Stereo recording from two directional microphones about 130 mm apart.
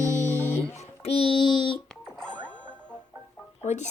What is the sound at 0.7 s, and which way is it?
A child's voice, 55° left (ahead or behind).